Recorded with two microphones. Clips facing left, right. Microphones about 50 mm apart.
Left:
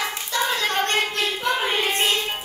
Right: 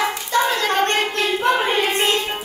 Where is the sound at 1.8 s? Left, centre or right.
Right.